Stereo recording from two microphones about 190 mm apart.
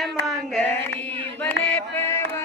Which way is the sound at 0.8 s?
10° left (ahead or behind).